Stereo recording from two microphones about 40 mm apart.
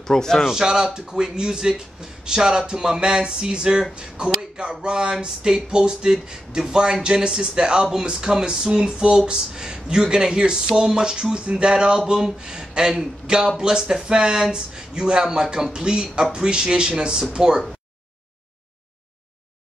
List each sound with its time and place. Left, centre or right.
0.0 s a man's voice: centre
0.5 s speech: centre